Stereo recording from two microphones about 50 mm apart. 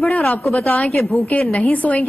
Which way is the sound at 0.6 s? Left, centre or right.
Left.